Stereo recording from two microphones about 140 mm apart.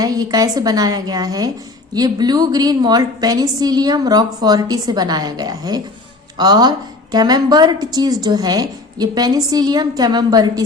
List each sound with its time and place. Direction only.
0.0 s a woman's voice: 25° right (ahead or behind)